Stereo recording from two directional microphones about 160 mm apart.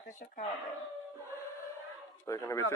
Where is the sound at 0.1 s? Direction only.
55° left (ahead or behind).